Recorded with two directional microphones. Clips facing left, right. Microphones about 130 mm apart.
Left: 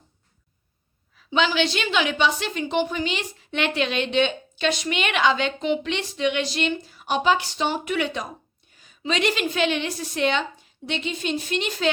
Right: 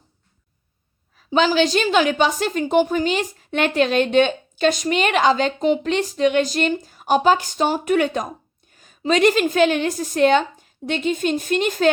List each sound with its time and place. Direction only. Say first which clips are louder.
1.1 s a woman's voice: right 5 dB; 40° right (ahead or behind)